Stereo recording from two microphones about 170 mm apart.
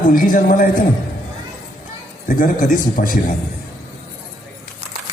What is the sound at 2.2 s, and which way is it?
A man's voice, 50° left (ahead or behind).